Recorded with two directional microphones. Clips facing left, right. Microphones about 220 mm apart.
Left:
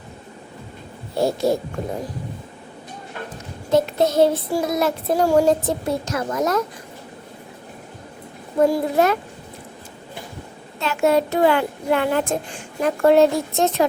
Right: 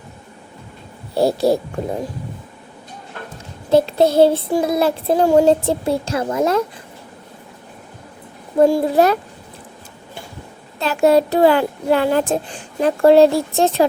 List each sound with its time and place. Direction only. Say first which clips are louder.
1.1 s a child's voice: right 4 dB; 35° right (ahead or behind)
3.7 s child singing: right 4 dB; 30° right (ahead or behind)
8.6 s a child's voice: right 4 dB; 30° right (ahead or behind)
10.8 s a child's voice: right 4 dB; 35° right (ahead or behind)